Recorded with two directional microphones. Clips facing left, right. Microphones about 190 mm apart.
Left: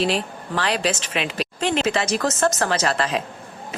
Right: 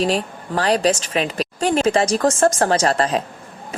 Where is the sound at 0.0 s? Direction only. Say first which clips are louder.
Right 2 dB; 40° right (ahead or behind).